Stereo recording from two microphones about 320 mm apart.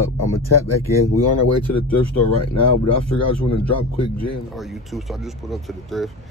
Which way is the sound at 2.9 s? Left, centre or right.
Left.